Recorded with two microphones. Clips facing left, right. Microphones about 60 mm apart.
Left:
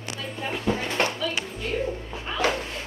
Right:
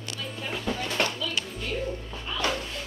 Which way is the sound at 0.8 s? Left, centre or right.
Left.